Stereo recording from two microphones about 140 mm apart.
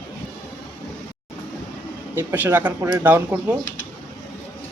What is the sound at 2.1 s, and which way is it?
Speech, 15° right (ahead or behind).